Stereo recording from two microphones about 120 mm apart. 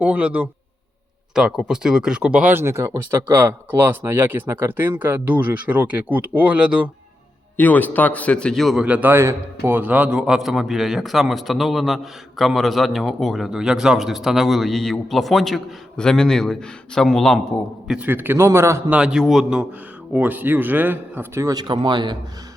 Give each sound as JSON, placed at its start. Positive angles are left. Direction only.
{"t": 0.0, "sound": "speech", "side_deg": -10}
{"t": 7.5, "sound": "speech", "side_deg": 15}
{"t": 17.9, "sound": "a man's voice", "side_deg": -15}
{"t": 18.9, "sound": "speech", "side_deg": -10}
{"t": 21.5, "sound": "speech", "side_deg": -40}